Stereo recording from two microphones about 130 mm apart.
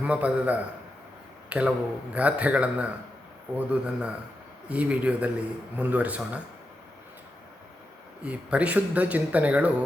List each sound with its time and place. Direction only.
0.0 s speech: 10° right (ahead or behind)
8.2 s speech: 10° right (ahead or behind)